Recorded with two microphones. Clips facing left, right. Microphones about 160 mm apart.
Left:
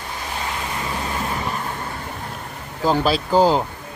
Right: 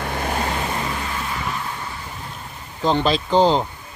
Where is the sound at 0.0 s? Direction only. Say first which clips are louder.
Right 6 dB; 60° right (ahead or behind).